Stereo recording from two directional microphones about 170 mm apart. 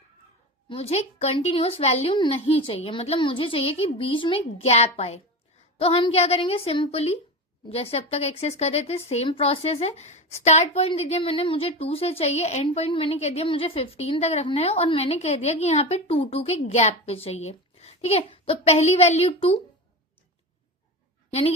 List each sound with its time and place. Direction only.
0.7 s a woman's voice: 35° left (ahead or behind)
21.2 s dog: 35° left (ahead or behind)